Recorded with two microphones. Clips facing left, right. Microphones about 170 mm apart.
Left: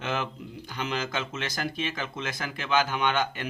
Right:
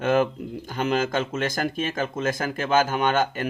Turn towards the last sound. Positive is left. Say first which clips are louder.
# right 5 dB
turn(degrees=-45)  # may be behind; listen again after turning